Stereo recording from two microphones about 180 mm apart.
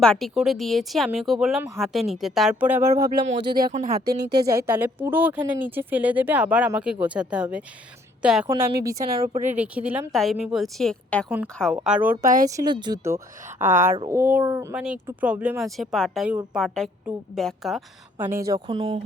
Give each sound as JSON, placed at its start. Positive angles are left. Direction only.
{"t": 0.0, "sound": "speech", "side_deg": 0}
{"t": 3.2, "sound": "speech", "side_deg": -75}
{"t": 3.6, "sound": "speech", "side_deg": -40}
{"t": 4.2, "sound": "a woman's voice", "side_deg": -65}
{"t": 4.4, "sound": "speech", "side_deg": -15}
{"t": 8.4, "sound": "speech", "side_deg": -15}
{"t": 9.3, "sound": "speech", "side_deg": -40}
{"t": 9.6, "sound": "speech", "side_deg": -5}
{"t": 12.2, "sound": "speech", "side_deg": -50}
{"t": 12.5, "sound": "speech", "side_deg": -25}
{"t": 18.2, "sound": "speech", "side_deg": -15}
{"t": 18.7, "sound": "speech", "side_deg": -35}